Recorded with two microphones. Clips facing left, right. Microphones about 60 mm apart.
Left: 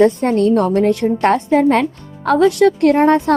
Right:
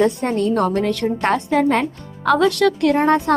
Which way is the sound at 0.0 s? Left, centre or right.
Left.